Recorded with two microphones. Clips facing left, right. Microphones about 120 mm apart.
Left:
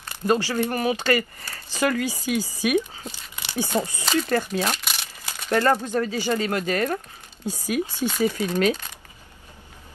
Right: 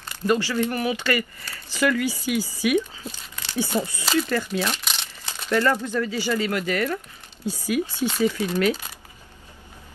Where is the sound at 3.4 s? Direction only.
15° left (ahead or behind).